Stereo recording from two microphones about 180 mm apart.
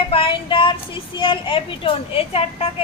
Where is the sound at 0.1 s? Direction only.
30° left (ahead or behind).